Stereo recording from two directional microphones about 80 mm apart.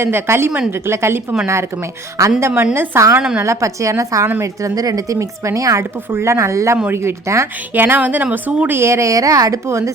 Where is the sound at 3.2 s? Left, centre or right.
Centre.